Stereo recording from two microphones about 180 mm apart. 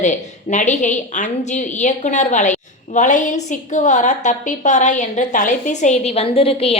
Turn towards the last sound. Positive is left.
turn(degrees=35)  # may be behind; listen again after turning